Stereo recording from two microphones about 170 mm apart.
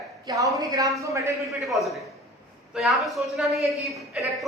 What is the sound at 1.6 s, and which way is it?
A man's voice, centre (ahead or behind).